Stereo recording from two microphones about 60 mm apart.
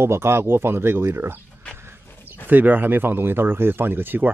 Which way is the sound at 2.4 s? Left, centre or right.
Right.